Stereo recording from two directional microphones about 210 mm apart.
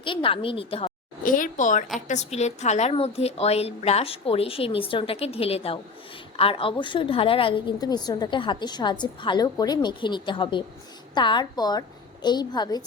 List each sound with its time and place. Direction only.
0.0 s a woman's voice: 25° left (ahead or behind)
1.2 s a woman's voice: 40° left (ahead or behind); by 12.8 s 20° left (ahead or behind)